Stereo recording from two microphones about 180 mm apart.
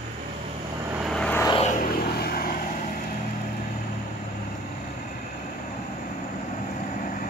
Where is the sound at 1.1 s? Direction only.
5° left (ahead or behind).